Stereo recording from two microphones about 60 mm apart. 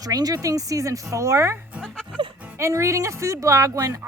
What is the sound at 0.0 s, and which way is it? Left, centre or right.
Speech, right.